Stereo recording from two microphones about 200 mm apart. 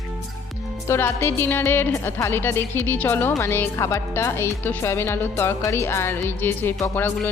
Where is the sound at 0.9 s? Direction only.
10° left (ahead or behind).